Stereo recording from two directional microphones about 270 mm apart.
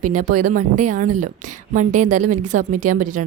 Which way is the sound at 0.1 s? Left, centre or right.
Right.